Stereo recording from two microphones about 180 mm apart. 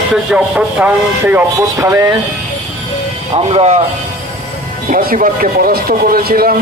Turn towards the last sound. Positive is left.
turn(degrees=-55)  # may be behind; listen again after turning